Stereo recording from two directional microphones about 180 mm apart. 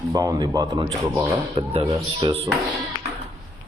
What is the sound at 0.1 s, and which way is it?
Speech, 20° right (ahead or behind).